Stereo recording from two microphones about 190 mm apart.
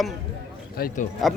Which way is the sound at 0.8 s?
50° left (ahead or behind).